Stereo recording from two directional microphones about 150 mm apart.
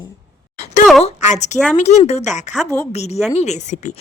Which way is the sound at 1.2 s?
50° left (ahead or behind).